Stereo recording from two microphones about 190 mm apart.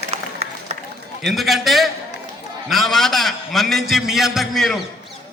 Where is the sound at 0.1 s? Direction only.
35° right (ahead or behind).